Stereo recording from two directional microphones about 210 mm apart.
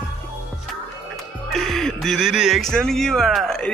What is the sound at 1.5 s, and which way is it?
Speech, centre (ahead or behind).